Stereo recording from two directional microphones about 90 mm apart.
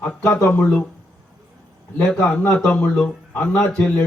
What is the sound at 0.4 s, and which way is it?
Speech, 20° left (ahead or behind).